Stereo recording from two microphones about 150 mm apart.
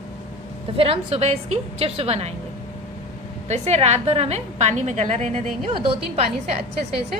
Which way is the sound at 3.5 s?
45° right (ahead or behind).